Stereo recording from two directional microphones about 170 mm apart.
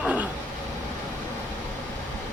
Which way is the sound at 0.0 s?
10° right (ahead or behind).